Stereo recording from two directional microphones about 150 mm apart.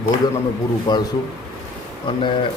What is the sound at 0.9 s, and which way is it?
Speech, 25° left (ahead or behind).